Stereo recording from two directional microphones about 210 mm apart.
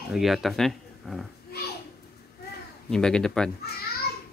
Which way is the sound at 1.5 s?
50° left (ahead or behind).